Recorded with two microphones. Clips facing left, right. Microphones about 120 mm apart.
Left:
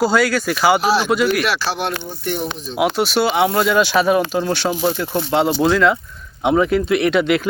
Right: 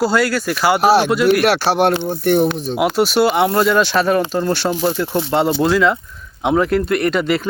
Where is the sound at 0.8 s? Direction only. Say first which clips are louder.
Right 3 dB; 60° right (ahead or behind).